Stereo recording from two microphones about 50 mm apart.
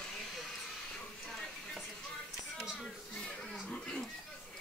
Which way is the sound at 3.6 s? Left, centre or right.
Centre.